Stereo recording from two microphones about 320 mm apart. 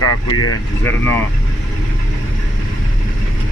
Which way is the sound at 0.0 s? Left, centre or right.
Left.